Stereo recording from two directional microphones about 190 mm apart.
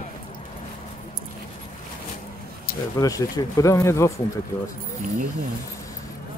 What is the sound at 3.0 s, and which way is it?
Speech, 20° left (ahead or behind).